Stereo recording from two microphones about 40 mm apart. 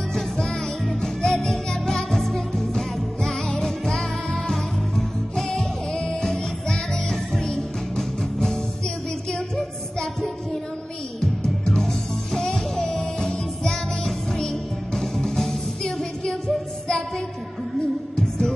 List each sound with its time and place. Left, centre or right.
1.0 s music: centre
9.3 s music: centre
11.1 s music: centre
18.1 s music: centre